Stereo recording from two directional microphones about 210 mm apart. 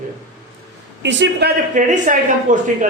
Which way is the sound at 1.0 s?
55° right (ahead or behind).